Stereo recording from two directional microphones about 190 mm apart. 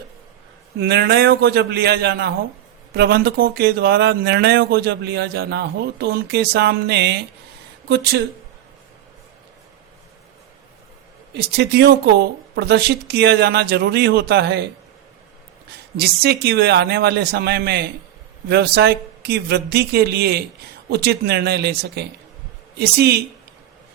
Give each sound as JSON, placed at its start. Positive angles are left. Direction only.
{"t": 0.8, "sound": "speech", "side_deg": -60}
{"t": 11.3, "sound": "speech", "side_deg": -60}
{"t": 16.0, "sound": "speech", "side_deg": -55}